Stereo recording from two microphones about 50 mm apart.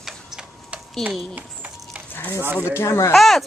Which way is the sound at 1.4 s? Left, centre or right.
Right.